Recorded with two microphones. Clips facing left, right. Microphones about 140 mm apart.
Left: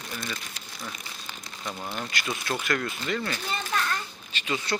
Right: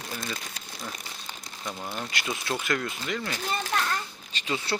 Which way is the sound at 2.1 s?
25° right (ahead or behind).